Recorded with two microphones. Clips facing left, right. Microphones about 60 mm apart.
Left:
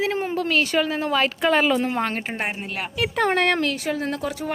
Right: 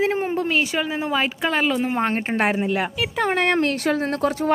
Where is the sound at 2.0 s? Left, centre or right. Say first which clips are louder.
Right 3 dB; right.